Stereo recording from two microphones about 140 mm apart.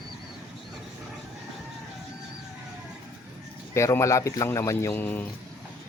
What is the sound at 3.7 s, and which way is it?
A man's voice, 20° left (ahead or behind).